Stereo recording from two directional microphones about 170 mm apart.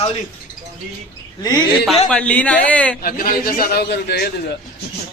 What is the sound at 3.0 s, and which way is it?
A man's voice, 60° left (ahead or behind).